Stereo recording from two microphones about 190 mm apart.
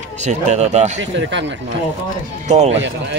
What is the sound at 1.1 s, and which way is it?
Speech, 70° right (ahead or behind).